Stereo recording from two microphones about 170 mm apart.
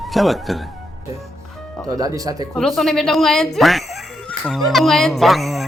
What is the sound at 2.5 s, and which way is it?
A woman's voice, centre (ahead or behind).